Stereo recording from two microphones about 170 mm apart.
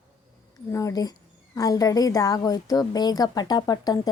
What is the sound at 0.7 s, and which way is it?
A woman's voice, 20° left (ahead or behind).